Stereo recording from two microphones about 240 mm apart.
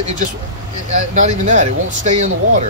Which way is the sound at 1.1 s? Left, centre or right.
Right.